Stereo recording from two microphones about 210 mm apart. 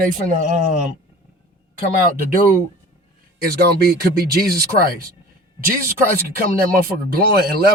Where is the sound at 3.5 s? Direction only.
50° right (ahead or behind).